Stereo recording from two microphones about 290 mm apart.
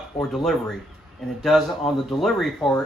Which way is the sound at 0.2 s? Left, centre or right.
Centre.